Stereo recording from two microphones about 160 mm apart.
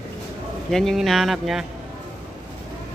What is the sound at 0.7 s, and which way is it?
Speech, centre (ahead or behind).